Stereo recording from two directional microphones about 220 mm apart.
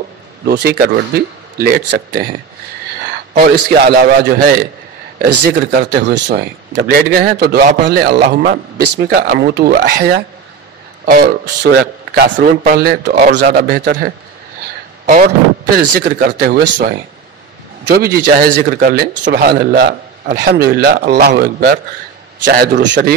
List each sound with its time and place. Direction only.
0.5 s a man's voice: 45° right (ahead or behind)
3.6 s a man's voice: 45° right (ahead or behind)
5.7 s a man's voice: 50° right (ahead or behind)